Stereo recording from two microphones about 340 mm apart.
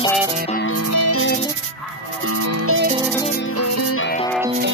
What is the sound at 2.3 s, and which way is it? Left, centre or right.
Music, right.